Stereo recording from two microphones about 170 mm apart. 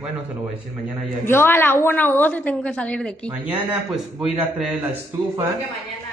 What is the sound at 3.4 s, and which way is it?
A man's voice, 10° right (ahead or behind).